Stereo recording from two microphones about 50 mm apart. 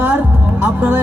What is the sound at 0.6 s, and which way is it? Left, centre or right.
Speech, right.